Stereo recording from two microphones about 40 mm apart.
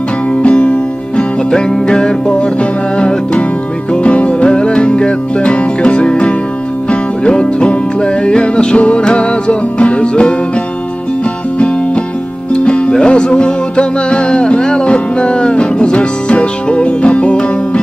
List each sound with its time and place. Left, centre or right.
0.3 s music: left
11.5 s music: left